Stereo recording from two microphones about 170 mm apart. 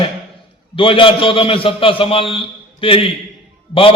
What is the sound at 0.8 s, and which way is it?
A man's voice, 30° left (ahead or behind).